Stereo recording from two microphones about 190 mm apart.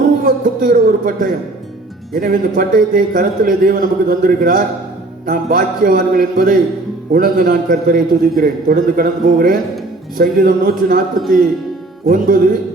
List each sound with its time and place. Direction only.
0.3 s a man's voice: 50° right (ahead or behind)
12.0 s a man's voice: 50° right (ahead or behind)